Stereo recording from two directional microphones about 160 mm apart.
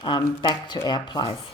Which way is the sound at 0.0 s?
30° left (ahead or behind).